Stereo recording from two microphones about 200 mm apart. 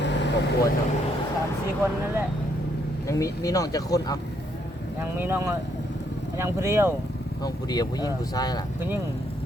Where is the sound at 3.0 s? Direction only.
15° left (ahead or behind).